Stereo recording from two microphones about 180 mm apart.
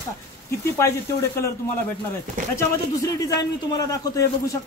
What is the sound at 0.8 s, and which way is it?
Speech, 15° left (ahead or behind).